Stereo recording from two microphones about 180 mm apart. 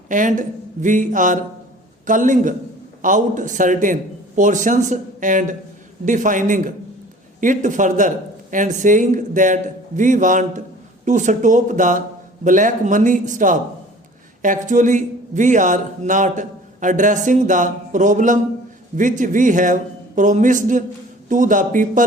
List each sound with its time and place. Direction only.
0.1 s a man's voice: 45° right (ahead or behind)